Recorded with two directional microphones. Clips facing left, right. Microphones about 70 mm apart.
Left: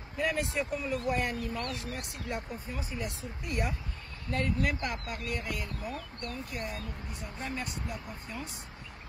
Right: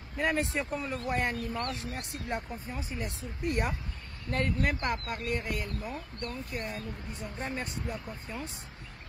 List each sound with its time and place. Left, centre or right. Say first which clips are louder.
0.2 s speech: right 1 dB; right